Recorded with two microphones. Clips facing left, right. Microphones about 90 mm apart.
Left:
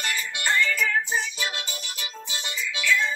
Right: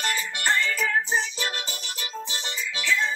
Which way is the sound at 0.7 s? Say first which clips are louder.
Even; 35° right (ahead or behind).